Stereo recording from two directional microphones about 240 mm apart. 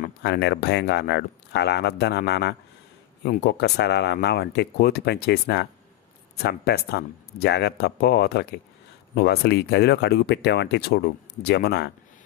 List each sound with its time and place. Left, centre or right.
0.0 s speech: left